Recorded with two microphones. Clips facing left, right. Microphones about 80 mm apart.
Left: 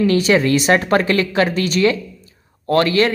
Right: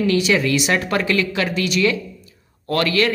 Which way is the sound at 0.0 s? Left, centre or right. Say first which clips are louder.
Left 3 dB; left.